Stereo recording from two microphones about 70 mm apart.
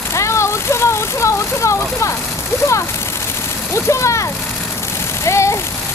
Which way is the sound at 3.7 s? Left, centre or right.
Left.